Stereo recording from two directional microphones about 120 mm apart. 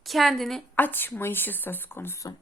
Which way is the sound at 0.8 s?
15° left (ahead or behind).